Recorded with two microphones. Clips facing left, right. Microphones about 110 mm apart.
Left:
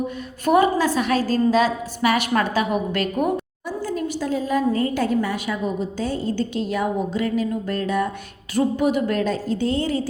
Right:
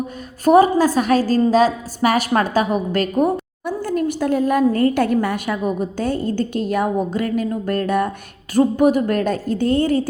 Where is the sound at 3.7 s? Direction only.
55° right (ahead or behind).